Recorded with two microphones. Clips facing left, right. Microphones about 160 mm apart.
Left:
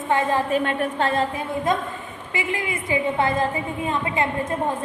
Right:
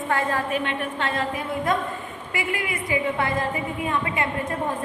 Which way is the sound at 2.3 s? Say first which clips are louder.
Left 1 dB; 20° left (ahead or behind).